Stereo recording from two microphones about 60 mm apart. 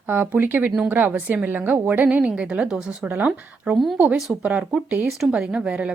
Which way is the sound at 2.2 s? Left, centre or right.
Centre.